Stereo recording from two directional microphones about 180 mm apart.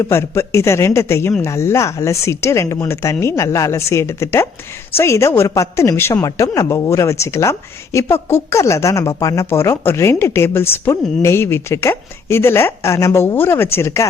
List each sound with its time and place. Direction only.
0.0 s a woman's voice: 15° left (ahead or behind)